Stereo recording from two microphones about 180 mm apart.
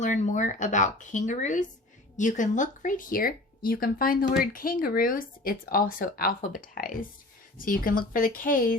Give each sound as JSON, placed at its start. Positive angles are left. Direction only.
{"t": 0.0, "sound": "speech", "side_deg": 45}